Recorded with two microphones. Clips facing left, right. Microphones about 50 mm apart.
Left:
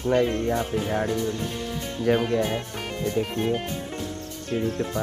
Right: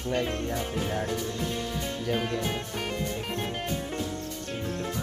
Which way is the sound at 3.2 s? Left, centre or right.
Centre.